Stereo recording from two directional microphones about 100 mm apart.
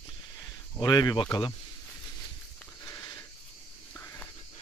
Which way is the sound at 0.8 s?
45° left (ahead or behind).